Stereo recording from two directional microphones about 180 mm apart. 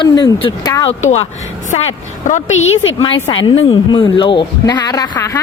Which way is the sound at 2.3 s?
40° left (ahead or behind).